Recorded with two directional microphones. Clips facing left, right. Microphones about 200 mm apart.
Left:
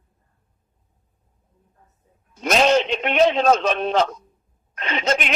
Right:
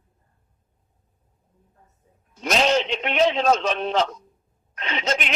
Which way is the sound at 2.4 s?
50° left (ahead or behind).